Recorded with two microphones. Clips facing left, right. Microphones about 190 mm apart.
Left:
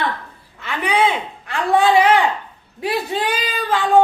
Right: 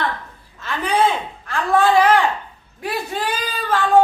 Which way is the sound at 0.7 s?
15° left (ahead or behind).